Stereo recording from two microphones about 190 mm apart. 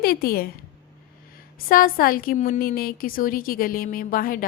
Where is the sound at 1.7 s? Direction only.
50° left (ahead or behind).